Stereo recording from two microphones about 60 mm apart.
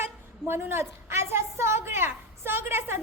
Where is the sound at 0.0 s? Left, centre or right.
Right.